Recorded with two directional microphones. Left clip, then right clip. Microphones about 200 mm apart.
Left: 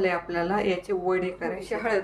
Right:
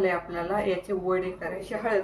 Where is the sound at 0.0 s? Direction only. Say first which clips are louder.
Left 1 dB; 40° left (ahead or behind).